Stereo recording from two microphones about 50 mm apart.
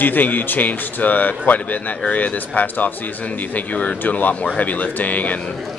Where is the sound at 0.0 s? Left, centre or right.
Left.